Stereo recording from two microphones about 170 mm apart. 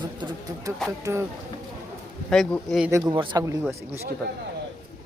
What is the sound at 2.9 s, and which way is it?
Speech, 15° right (ahead or behind).